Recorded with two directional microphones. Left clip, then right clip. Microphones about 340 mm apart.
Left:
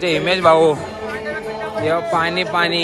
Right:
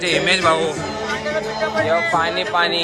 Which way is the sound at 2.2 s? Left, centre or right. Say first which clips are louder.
Even; left.